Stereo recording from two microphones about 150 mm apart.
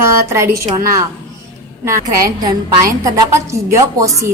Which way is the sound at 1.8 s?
20° right (ahead or behind).